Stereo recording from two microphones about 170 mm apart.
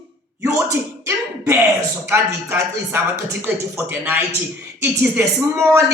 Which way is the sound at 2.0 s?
15° right (ahead or behind).